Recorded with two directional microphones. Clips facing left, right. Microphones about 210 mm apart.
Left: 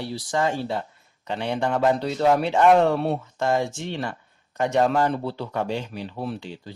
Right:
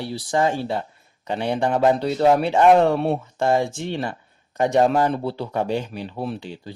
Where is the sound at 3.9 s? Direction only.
15° right (ahead or behind).